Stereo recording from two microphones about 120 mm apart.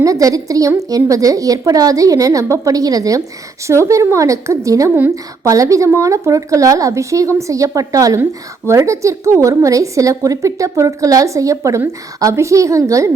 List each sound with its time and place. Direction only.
0.0 s a woman's voice: 30° right (ahead or behind)
4.9 s a woman's voice: 15° right (ahead or behind)
5.5 s a woman's voice: 25° right (ahead or behind)